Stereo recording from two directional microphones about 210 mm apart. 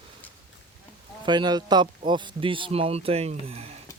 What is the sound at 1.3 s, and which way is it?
Speech, 20° right (ahead or behind).